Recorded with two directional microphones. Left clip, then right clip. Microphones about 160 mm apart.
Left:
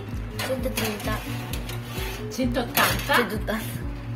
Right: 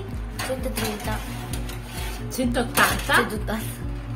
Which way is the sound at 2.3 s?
75° right (ahead or behind).